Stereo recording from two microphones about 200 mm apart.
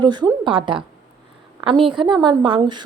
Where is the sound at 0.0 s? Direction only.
20° right (ahead or behind).